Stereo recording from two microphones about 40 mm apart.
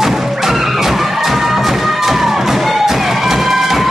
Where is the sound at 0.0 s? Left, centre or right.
Centre.